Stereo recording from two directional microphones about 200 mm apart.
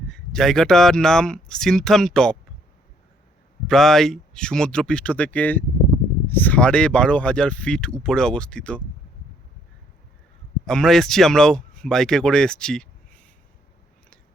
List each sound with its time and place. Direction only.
0.1 s speech: centre (ahead or behind)
3.7 s speech: centre (ahead or behind)
10.7 s speech: 5° left (ahead or behind)